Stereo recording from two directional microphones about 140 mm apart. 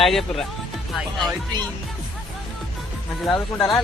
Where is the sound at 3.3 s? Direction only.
20° left (ahead or behind).